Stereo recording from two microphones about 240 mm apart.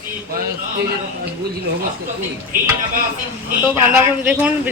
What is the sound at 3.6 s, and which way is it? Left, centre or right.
A woman's voice, centre.